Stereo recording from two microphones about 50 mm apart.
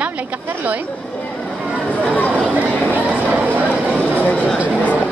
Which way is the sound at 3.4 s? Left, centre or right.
Right.